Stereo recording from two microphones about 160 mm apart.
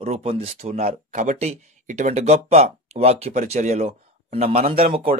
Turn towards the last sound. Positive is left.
turn(degrees=-35)  # may be behind; listen again after turning